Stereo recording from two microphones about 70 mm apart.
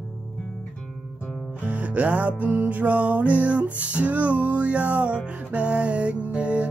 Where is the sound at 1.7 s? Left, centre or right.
Right.